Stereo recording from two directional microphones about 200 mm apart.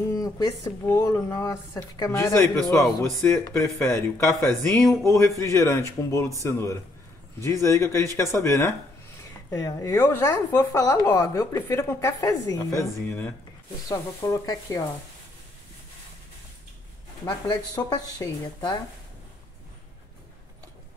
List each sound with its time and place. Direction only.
0.1 s speech: 15° left (ahead or behind)
17.2 s speech: 20° left (ahead or behind)